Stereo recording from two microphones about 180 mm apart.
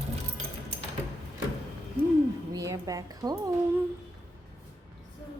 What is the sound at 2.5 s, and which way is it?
A woman's voice, 20° right (ahead or behind).